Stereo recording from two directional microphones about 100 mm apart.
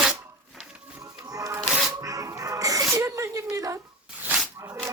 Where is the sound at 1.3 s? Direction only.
35° right (ahead or behind).